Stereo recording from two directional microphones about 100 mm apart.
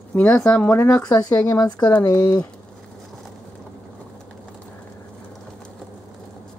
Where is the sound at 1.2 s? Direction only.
35° left (ahead or behind).